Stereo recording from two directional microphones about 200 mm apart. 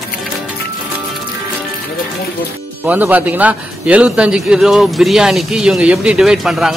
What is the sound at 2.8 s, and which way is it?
A man's voice, 10° right (ahead or behind).